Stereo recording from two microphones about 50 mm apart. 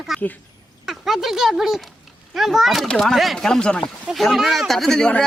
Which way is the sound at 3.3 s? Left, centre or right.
Centre.